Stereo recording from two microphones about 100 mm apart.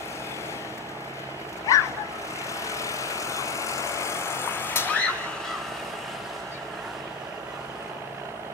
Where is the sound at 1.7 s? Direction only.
30° left (ahead or behind).